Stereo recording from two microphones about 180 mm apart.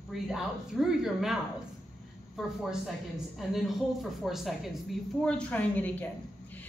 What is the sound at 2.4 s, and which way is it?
A woman's voice, centre (ahead or behind).